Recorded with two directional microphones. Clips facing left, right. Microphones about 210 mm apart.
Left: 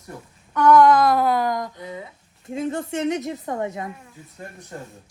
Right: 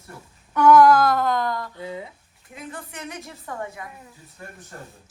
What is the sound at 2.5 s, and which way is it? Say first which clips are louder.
A woman's voice: left 12 dB; 25° left (ahead or behind).